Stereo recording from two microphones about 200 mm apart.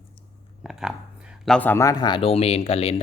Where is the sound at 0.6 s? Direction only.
Centre (ahead or behind).